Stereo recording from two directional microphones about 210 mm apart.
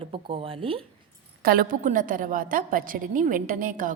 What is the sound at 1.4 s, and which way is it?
A woman's voice, 45° right (ahead or behind).